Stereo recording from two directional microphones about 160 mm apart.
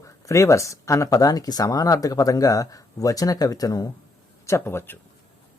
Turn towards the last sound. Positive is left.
turn(degrees=15)  # may be behind; listen again after turning